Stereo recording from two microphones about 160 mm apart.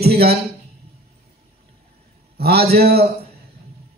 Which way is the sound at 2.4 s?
80° right.